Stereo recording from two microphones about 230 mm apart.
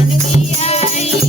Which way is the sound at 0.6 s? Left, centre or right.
Left.